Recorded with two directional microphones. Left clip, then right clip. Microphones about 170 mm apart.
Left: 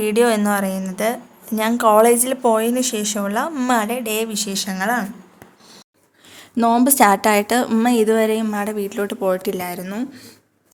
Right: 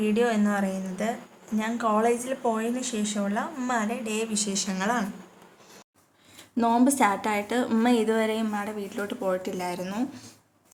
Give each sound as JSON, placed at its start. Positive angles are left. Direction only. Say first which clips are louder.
{"t": 0.0, "sound": "a woman's voice", "louder": "left 8 dB", "side_deg": 55}
{"t": 6.6, "sound": "a woman's voice", "louder": "left 8 dB", "side_deg": 45}
{"t": 7.7, "sound": "speech", "louder": "left 7 dB", "side_deg": 50}
{"t": 10.0, "sound": "speech", "louder": "left 3 dB", "side_deg": 20}